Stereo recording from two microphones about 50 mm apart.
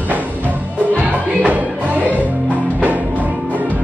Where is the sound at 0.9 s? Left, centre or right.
Right.